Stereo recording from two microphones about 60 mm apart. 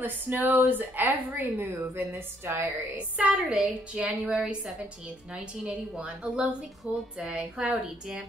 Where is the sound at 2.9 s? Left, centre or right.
Centre.